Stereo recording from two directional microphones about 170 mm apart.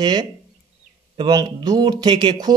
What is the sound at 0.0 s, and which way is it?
Speech, 25° right (ahead or behind).